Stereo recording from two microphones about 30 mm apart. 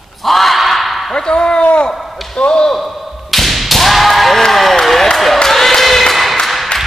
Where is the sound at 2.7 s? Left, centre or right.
Centre.